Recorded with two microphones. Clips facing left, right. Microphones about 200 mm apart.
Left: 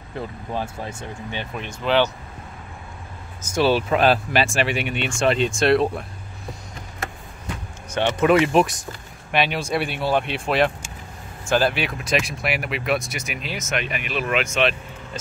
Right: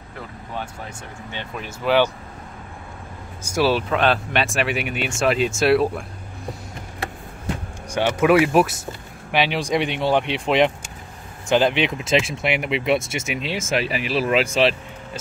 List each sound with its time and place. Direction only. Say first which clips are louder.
0.5 s speech: left 2 dB; 25° left (ahead or behind)
1.5 s speech: right 2 dB; 5° right (ahead or behind)
3.4 s speech: left 1 dB; 5° right (ahead or behind)
7.9 s speech: right 1 dB; 10° right (ahead or behind); by 14.8 s 30° right (ahead or behind)